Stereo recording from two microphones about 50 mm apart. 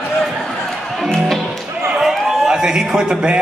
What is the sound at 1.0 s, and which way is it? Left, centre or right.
Music, centre.